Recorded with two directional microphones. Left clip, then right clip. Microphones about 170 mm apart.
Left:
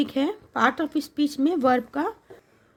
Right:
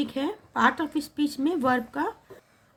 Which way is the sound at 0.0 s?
45° left (ahead or behind).